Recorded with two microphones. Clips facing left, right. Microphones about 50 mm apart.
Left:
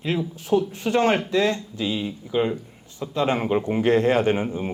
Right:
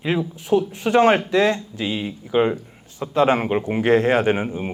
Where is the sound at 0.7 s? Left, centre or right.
Right.